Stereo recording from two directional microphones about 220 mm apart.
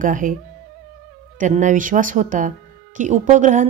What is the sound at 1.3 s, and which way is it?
A woman's voice, 35° right (ahead or behind).